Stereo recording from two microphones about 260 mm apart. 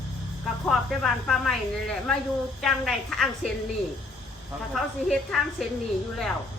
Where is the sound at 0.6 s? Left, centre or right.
Centre.